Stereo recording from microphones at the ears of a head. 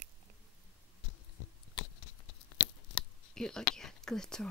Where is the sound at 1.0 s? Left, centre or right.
Left.